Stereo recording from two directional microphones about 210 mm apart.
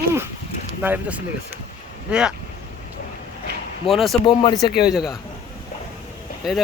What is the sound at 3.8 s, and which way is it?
Speech, centre (ahead or behind).